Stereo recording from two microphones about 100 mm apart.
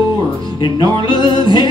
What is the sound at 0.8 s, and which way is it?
Music, 50° left (ahead or behind).